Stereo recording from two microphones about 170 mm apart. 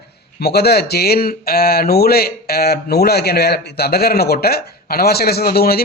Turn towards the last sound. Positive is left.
turn(degrees=65)  # may be behind; listen again after turning